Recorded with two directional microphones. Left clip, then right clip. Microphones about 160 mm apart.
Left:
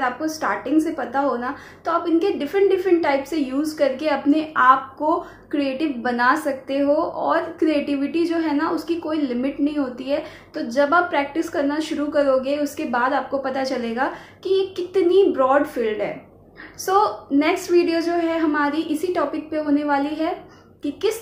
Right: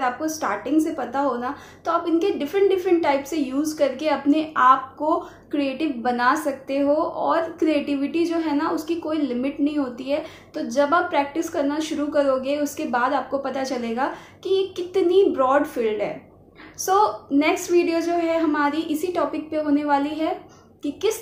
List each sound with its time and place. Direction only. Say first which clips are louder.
0.0 s a woman's voice: left 1 dB; centre (ahead or behind)